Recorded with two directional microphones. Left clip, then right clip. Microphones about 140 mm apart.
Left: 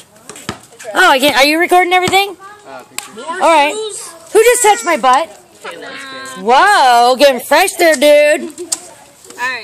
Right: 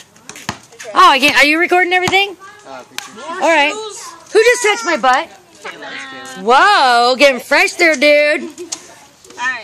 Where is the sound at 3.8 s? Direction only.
30° right (ahead or behind).